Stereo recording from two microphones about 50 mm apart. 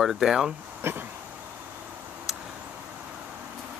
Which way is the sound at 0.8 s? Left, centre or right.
Right.